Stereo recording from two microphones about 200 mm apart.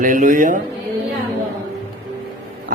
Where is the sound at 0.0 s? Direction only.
40° right (ahead or behind).